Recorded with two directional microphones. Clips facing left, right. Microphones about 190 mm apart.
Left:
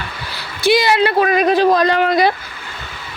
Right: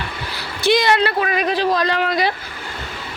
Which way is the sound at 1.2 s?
40° left (ahead or behind).